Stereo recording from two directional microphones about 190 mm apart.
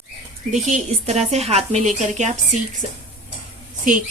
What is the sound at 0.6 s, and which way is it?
Speech, 35° right (ahead or behind).